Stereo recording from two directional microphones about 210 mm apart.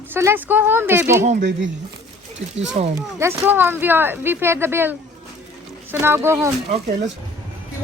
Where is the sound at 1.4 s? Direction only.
55° right (ahead or behind).